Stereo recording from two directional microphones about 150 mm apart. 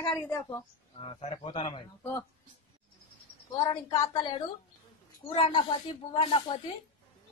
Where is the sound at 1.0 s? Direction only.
40° left (ahead or behind).